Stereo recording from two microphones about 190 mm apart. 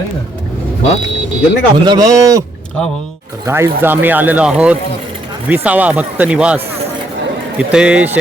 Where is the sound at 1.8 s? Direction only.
20° right (ahead or behind).